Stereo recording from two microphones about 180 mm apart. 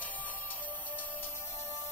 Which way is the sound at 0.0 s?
10° left (ahead or behind).